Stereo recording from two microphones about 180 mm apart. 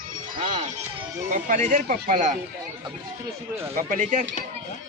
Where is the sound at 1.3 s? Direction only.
45° right (ahead or behind).